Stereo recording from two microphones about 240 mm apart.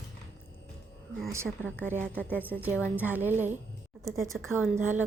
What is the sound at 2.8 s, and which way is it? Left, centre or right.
A woman's voice, centre.